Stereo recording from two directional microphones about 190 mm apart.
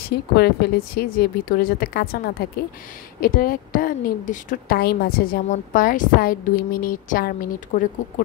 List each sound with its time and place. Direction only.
0.0 s a woman's voice: 55° left (ahead or behind)